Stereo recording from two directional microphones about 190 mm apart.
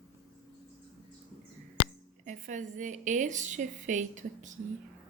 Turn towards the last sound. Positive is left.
turn(degrees=-40)  # may be behind; listen again after turning